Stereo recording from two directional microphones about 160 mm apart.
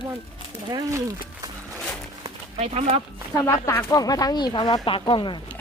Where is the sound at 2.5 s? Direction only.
40° right (ahead or behind).